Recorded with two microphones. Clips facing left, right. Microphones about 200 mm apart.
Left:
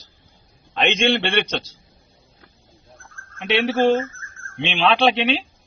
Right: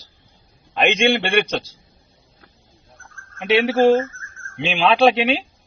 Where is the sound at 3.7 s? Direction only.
35° right (ahead or behind).